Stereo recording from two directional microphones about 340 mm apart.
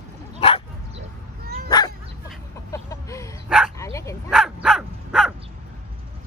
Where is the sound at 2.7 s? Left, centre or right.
Centre.